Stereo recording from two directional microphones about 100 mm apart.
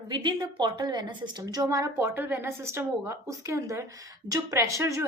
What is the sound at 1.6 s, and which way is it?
A woman's voice, 35° right (ahead or behind).